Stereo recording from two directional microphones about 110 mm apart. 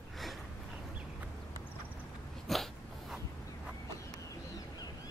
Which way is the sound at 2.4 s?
Centre (ahead or behind).